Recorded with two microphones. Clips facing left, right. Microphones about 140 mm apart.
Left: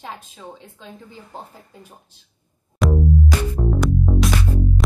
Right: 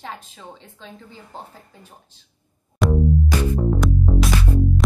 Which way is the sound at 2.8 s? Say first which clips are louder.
Even; centre (ahead or behind).